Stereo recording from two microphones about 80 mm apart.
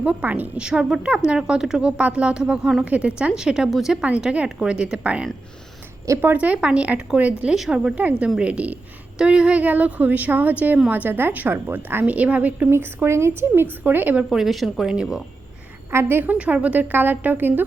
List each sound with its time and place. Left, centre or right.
0.0 s a woman's voice: centre
7.5 s a woman's voice: centre
8.4 s a woman's voice: centre
12.7 s a woman's voice: right
14.3 s a woman's voice: centre
15.9 s a woman's voice: right